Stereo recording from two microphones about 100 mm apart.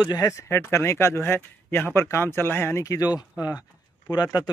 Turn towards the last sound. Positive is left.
turn(degrees=40)  # may be behind; listen again after turning